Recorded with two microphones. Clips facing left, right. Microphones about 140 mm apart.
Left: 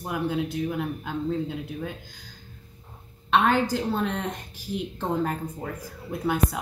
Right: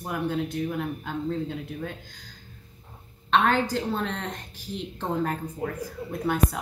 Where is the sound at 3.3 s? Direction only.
5° left (ahead or behind).